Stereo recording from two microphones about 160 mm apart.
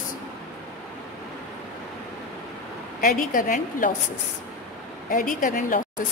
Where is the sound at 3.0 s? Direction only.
60° left (ahead or behind).